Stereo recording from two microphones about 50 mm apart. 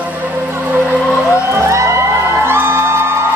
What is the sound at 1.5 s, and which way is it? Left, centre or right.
Music, right.